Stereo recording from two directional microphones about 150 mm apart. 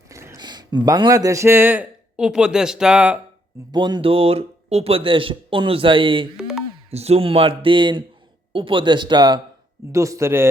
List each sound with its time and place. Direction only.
0.1 s a sound: 20° right (ahead or behind)
0.9 s a man's voice: 25° right (ahead or behind); by 3.2 s 5° right (ahead or behind)
3.7 s speech: 30° right (ahead or behind)
6.3 s music: 5° right (ahead or behind)
6.9 s a man's voice: 45° right (ahead or behind); by 10.5 s 15° right (ahead or behind)